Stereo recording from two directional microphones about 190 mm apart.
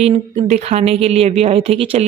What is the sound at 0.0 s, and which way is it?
Speech, 35° right (ahead or behind).